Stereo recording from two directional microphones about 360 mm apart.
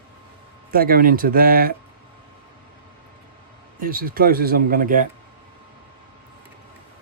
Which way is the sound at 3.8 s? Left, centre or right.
Right.